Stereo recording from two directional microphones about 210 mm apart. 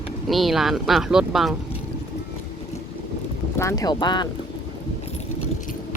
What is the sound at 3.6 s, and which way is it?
Speech, 15° left (ahead or behind).